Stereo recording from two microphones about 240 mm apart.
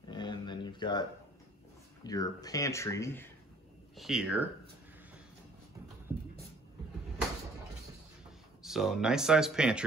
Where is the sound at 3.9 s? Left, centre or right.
Centre.